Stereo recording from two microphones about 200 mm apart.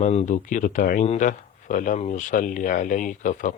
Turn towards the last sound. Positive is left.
turn(degrees=40)  # may be behind; listen again after turning